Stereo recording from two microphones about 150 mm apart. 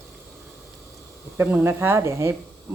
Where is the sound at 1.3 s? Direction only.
10° right (ahead or behind).